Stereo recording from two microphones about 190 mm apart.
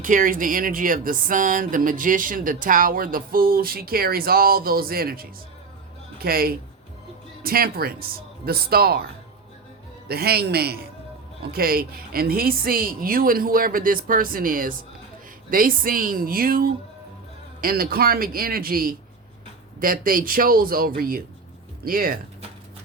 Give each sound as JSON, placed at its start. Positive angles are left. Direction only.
{"t": 0.0, "sound": "speech", "side_deg": -45}
{"t": 10.1, "sound": "a man's voice", "side_deg": -55}